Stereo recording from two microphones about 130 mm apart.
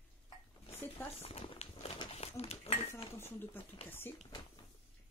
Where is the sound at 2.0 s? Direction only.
50° left (ahead or behind).